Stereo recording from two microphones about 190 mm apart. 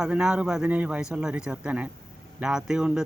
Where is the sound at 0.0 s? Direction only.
5° right (ahead or behind).